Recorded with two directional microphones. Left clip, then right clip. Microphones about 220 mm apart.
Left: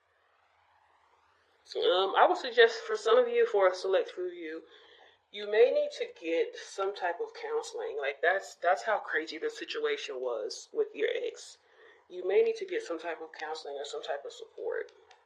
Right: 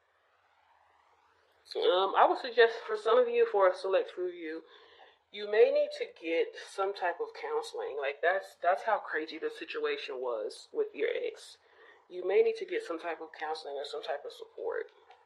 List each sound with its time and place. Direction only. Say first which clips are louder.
1.6 s speech: even; 30° right (ahead or behind)